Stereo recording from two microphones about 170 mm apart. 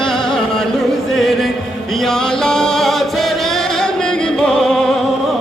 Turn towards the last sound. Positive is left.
turn(degrees=0)  # may be behind; listen again after turning